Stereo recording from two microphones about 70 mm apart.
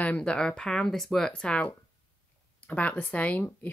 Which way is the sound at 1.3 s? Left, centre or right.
Centre.